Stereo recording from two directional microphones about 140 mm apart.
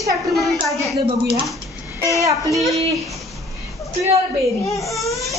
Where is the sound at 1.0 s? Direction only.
40° right (ahead or behind).